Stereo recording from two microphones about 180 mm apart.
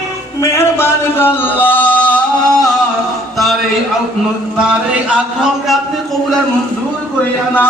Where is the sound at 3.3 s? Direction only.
Centre (ahead or behind).